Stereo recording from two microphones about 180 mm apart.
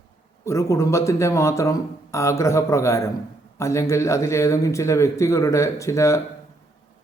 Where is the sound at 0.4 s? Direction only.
15° left (ahead or behind).